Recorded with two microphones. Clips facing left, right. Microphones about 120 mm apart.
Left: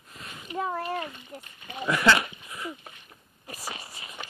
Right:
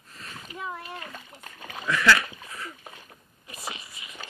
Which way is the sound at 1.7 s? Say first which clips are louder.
Even; 25° left (ahead or behind).